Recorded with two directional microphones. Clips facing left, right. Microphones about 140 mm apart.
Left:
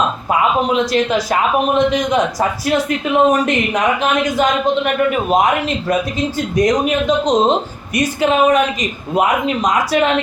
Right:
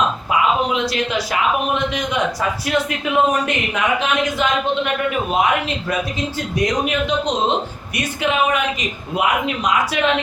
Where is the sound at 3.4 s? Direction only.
40° left (ahead or behind).